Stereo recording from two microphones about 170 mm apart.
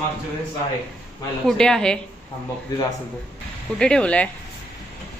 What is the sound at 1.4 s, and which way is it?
Speech, 5° left (ahead or behind).